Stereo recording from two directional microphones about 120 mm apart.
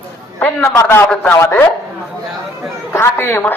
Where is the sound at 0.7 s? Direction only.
20° left (ahead or behind).